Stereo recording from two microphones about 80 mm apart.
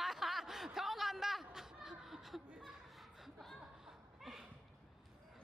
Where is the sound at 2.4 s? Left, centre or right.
Centre.